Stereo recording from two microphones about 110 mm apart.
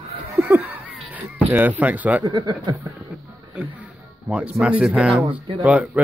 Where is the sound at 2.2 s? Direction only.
40° right (ahead or behind).